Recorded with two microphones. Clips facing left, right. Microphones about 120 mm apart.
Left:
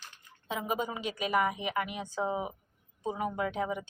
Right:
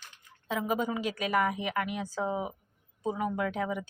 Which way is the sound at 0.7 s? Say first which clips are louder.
Right 2 dB; centre (ahead or behind).